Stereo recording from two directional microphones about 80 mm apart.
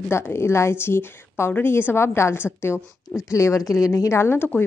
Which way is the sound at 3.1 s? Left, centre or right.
Left.